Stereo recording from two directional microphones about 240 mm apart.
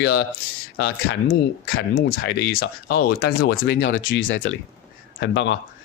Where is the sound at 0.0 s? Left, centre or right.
Left.